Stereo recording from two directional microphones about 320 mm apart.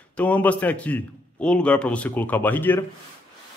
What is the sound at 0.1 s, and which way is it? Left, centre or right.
Speech, centre.